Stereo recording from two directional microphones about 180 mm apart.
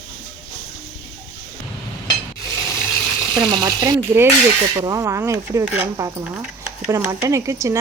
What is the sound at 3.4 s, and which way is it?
Speech, 25° right (ahead or behind).